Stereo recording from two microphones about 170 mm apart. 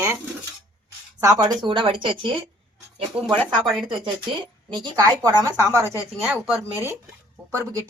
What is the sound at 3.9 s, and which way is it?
Speech, 30° right (ahead or behind).